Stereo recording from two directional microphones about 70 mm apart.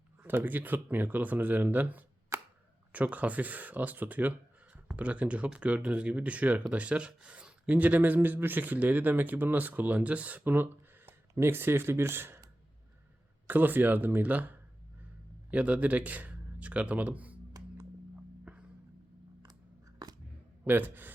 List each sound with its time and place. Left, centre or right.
0.2 s speech: right
2.3 s a sound: right
2.9 s speech: right
13.5 s speech: right
20.7 s speech: right